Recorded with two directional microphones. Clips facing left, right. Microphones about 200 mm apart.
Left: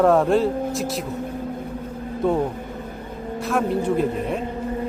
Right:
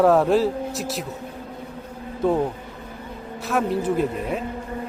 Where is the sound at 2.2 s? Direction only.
Centre (ahead or behind).